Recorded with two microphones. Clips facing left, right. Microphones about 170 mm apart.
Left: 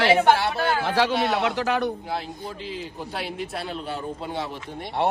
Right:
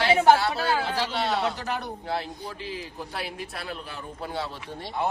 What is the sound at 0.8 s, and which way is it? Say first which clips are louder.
Speech: left 6 dB; 90° left.